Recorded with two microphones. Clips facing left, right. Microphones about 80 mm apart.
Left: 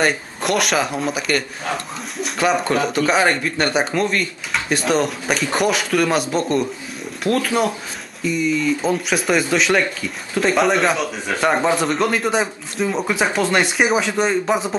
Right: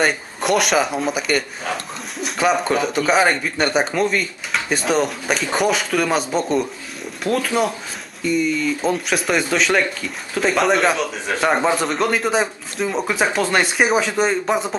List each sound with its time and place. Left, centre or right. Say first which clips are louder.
0.0 s speech: even; centre